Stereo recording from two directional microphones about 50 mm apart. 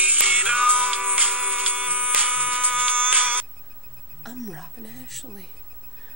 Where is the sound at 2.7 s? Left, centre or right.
Right.